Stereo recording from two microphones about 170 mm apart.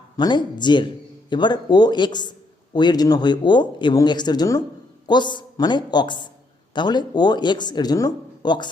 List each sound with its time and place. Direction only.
0.2 s speech: 25° left (ahead or behind)